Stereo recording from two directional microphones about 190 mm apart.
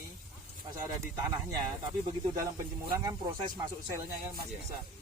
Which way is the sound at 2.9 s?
20° right (ahead or behind).